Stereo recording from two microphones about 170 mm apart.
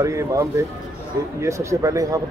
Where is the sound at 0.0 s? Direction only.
20° right (ahead or behind).